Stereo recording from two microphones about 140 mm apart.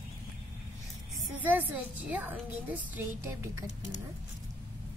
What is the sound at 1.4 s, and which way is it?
A woman's voice, 15° right (ahead or behind).